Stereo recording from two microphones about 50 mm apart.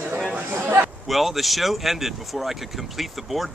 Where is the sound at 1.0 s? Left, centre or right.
Centre.